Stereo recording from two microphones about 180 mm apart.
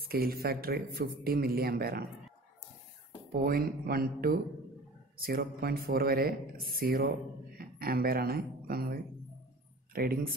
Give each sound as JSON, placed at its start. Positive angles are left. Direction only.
{"t": 0.0, "sound": "a man's voice", "side_deg": -55}
{"t": 3.3, "sound": "a man's voice", "side_deg": -55}